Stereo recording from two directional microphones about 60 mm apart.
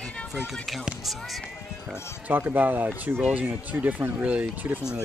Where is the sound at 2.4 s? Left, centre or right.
Right.